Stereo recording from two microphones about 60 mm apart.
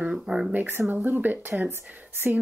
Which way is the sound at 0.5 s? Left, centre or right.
Right.